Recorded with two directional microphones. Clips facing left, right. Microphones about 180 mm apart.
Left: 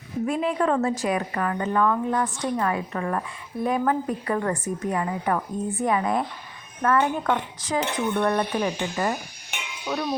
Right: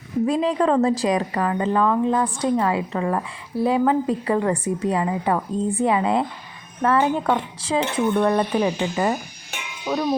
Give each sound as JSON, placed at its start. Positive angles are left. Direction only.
{"t": 0.3, "sound": "a woman's voice", "side_deg": -35}